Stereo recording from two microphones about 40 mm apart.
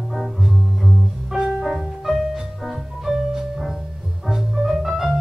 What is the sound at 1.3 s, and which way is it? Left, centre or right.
Music, centre.